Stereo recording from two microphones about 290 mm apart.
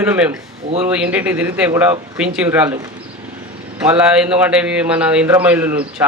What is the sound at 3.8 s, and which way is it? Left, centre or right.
A man's voice, centre.